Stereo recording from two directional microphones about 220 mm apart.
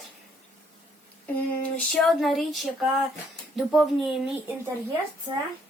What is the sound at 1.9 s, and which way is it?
Speech, centre (ahead or behind).